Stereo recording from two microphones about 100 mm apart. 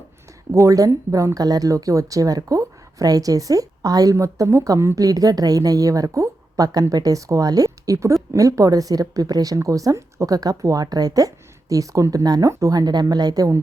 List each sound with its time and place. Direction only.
0.5 s speech: 35° right (ahead or behind)